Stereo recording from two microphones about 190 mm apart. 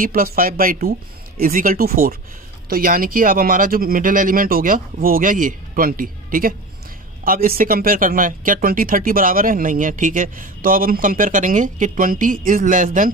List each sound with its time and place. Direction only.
0.0 s speech: 50° right (ahead or behind)